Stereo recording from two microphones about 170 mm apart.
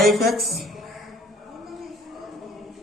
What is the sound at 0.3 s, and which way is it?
Speech, centre (ahead or behind).